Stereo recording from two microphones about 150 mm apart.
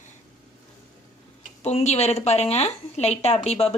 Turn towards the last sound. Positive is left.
turn(degrees=45)  # may be behind; listen again after turning